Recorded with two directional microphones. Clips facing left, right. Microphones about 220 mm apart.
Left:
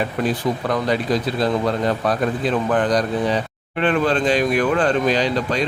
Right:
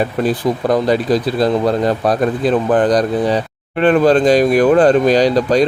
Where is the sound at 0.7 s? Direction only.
35° right (ahead or behind).